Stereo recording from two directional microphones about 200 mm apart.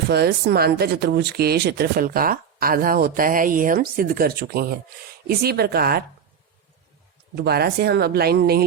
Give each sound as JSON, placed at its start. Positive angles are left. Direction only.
{"t": 0.1, "sound": "speech", "side_deg": -55}
{"t": 7.3, "sound": "speech", "side_deg": -50}